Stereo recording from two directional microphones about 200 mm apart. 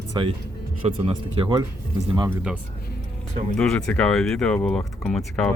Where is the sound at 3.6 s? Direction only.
5° left (ahead or behind).